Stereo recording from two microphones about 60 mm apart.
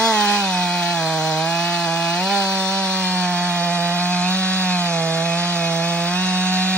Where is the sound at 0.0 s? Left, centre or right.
Centre.